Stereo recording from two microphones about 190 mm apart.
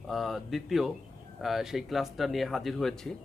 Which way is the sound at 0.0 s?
Centre (ahead or behind).